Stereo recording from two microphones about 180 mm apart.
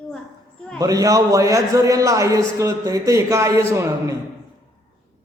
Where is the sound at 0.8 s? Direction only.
20° right (ahead or behind).